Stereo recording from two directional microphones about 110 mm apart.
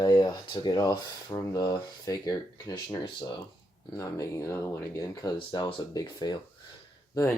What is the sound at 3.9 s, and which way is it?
Speech, 25° left (ahead or behind).